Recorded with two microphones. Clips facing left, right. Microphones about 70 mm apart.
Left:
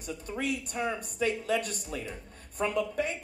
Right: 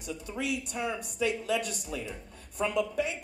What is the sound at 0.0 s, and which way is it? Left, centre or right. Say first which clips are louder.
Speech: left 1 dB; left.